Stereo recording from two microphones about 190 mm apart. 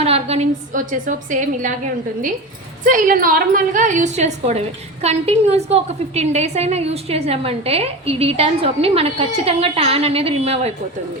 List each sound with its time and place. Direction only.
0.0 s a woman's voice: 35° right (ahead or behind)
2.8 s a woman's voice: 45° right (ahead or behind)